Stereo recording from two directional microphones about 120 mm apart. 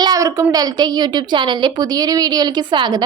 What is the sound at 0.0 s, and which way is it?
A woman's voice, 30° right (ahead or behind).